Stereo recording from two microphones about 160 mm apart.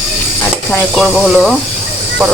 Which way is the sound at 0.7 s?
Centre (ahead or behind).